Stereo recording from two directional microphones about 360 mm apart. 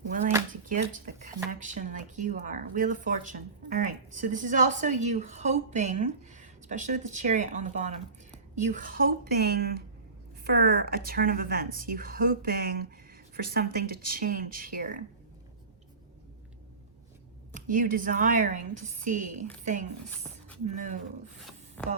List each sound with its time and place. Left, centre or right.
0.7 s a sound: right
1.5 s speech: right
17.5 s speech: right
21.8 s speech: centre